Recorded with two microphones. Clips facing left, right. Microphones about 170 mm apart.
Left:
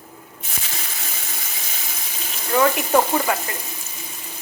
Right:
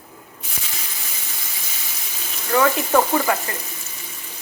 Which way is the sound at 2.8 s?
15° left (ahead or behind).